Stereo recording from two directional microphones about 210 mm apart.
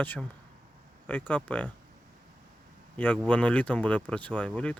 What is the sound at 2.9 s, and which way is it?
Speech, 5° left (ahead or behind).